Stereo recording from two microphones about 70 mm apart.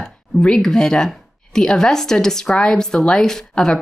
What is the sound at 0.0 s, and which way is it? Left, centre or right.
Speech, centre.